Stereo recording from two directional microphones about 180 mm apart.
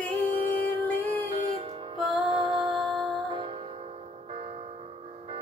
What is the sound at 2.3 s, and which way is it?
Music, 30° right (ahead or behind).